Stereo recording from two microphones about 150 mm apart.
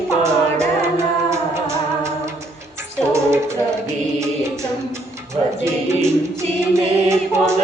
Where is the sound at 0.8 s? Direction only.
20° right (ahead or behind).